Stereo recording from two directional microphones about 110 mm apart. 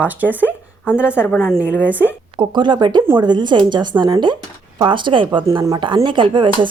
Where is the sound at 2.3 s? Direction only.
45° right (ahead or behind).